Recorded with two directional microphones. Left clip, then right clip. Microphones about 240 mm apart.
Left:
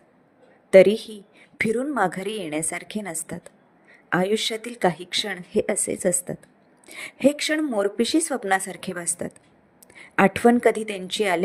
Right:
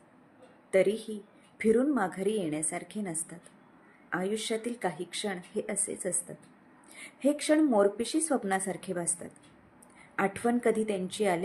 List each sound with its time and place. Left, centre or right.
0.7 s speech: left